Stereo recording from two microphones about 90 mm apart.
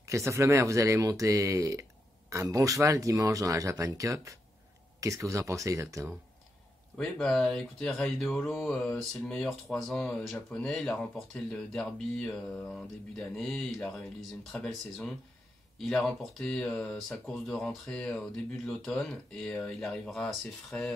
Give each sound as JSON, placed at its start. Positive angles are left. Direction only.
{"t": 0.0, "sound": "speech", "side_deg": -35}
{"t": 7.0, "sound": "speech", "side_deg": 5}